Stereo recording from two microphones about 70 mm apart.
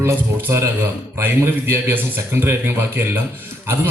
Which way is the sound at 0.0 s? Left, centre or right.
Right.